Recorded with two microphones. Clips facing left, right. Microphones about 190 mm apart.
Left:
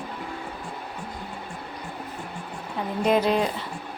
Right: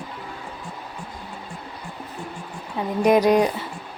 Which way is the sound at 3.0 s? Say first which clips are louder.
Right 5 dB; 15° right (ahead or behind).